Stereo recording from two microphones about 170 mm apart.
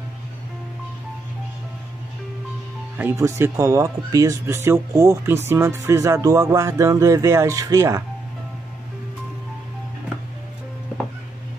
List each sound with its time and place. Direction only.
3.0 s speech: 15° right (ahead or behind)